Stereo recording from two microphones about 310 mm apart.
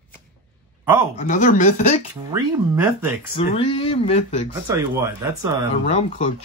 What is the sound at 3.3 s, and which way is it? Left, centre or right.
Speech, centre.